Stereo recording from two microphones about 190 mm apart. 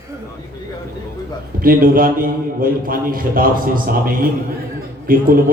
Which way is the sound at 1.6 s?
50° right (ahead or behind).